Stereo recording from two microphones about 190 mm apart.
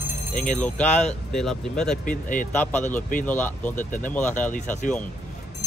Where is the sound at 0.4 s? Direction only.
5° left (ahead or behind).